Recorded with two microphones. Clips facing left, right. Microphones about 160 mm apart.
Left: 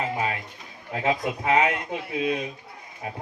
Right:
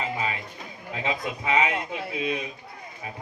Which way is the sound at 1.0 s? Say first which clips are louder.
Left 4 dB; 55° left (ahead or behind).